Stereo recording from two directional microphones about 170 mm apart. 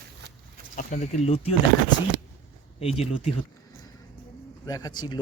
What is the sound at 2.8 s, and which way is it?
Speech, 35° left (ahead or behind).